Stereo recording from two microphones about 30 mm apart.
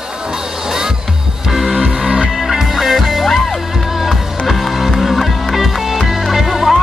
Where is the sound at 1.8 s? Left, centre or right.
Right.